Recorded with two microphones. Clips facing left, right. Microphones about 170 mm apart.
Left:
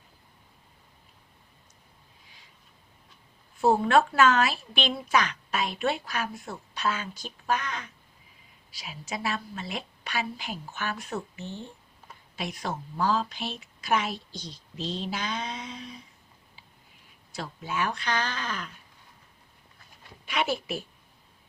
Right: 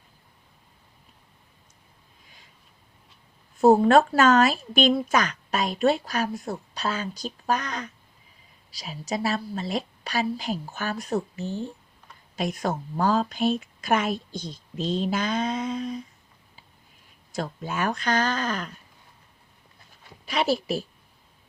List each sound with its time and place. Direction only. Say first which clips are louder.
3.6 s a woman's voice: right 5 dB; 40° right (ahead or behind)
17.3 s speech: right 3 dB; 45° right (ahead or behind)
20.2 s a woman's voice: right 5 dB; 35° right (ahead or behind)